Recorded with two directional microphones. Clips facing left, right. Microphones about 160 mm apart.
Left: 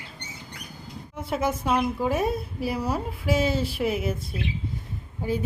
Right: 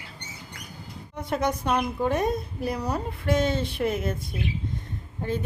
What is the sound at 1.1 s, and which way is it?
A woman's voice, 5° left (ahead or behind).